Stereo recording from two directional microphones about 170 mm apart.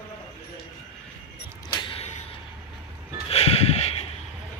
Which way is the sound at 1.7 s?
30° left (ahead or behind).